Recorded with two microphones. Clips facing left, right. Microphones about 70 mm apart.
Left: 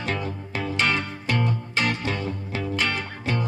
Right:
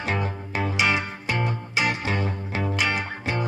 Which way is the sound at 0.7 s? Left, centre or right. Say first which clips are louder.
Even; centre.